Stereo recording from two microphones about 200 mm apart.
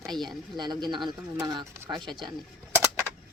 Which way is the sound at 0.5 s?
20° right (ahead or behind).